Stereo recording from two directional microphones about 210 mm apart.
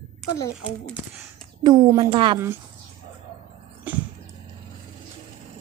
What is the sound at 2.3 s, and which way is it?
Speech, 10° right (ahead or behind).